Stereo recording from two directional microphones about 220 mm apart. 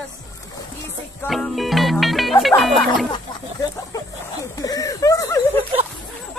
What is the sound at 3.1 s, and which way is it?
Speech, 20° left (ahead or behind).